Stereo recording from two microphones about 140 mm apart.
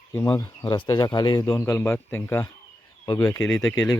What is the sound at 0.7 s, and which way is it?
Speech, 30° left (ahead or behind).